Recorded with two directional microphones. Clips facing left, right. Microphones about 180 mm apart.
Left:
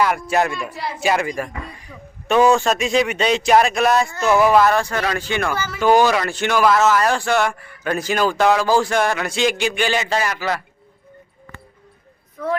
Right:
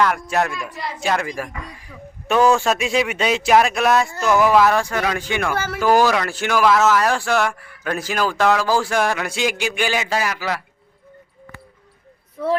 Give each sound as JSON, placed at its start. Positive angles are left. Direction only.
{"t": 0.0, "sound": "speech", "side_deg": 5}
{"t": 5.5, "sound": "speech", "side_deg": -60}
{"t": 5.8, "sound": "speech", "side_deg": -5}